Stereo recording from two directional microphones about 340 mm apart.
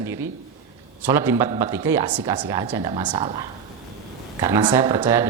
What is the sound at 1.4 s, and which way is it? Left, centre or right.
Speech, centre.